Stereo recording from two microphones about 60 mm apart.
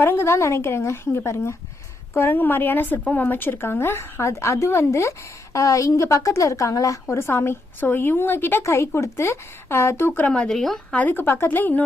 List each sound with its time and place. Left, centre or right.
0.0 s a woman's voice: left
2.1 s a woman's voice: left
8.6 s a woman's voice: left
10.2 s speech: centre
10.5 s speech: centre
11.1 s speech: left